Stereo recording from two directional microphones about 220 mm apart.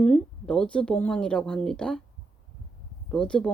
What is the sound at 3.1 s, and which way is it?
Speech, 5° left (ahead or behind).